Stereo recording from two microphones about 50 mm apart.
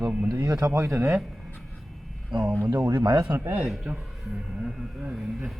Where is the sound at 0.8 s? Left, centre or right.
Right.